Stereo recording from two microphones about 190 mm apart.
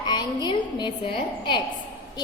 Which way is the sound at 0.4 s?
25° left (ahead or behind).